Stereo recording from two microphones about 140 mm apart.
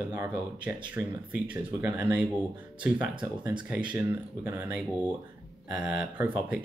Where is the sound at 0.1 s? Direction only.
20° right (ahead or behind).